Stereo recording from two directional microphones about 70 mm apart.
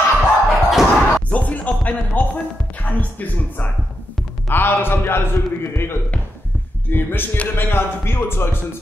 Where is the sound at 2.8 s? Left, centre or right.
Left.